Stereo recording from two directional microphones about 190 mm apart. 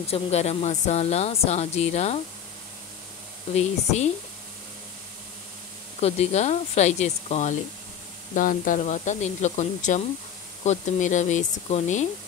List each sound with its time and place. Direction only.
0.0 s speech: 35° left (ahead or behind)
3.5 s speech: 35° left (ahead or behind)
5.9 s speech: 35° left (ahead or behind)